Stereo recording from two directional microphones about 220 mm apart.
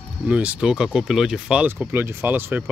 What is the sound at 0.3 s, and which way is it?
Speech, 5° right (ahead or behind).